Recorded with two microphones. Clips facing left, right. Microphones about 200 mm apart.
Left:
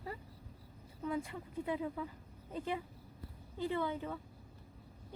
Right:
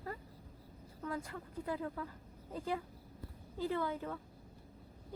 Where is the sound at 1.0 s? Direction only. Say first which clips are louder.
Left 4 dB; 25° left (ahead or behind).